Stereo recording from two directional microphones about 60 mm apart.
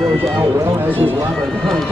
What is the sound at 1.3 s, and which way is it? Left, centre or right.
Run, centre.